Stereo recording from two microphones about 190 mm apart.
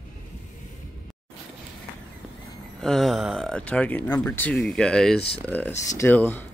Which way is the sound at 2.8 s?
Centre (ahead or behind).